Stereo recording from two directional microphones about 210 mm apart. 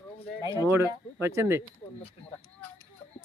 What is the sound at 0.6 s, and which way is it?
Speech, 15° right (ahead or behind).